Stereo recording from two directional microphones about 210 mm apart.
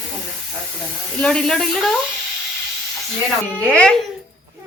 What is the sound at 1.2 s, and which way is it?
Speech, 5° left (ahead or behind).